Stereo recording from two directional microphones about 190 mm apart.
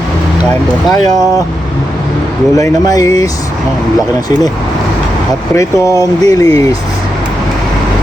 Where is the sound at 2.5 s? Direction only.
20° left (ahead or behind).